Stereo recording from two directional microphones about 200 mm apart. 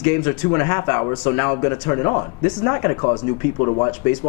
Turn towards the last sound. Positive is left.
turn(degrees=25)  # may be behind; listen again after turning